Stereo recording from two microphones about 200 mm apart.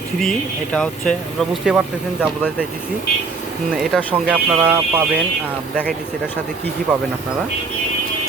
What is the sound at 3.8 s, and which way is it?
Speech, 5° right (ahead or behind).